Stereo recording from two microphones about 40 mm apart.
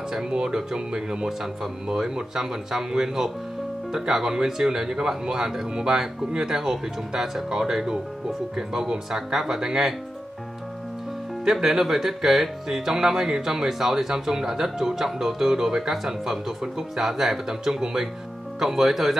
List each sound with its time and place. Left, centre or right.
0.1 s speech: centre
11.4 s speech: centre